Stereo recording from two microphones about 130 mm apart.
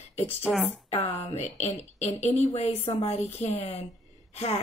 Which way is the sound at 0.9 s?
55° left (ahead or behind).